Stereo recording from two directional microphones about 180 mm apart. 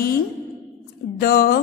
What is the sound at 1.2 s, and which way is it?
Speech, 60° left (ahead or behind).